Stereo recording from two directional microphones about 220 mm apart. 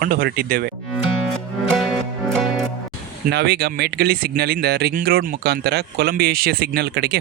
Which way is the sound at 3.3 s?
45° right (ahead or behind).